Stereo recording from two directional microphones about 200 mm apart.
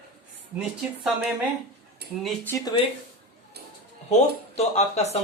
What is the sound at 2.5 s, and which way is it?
Speech, 20° left (ahead or behind).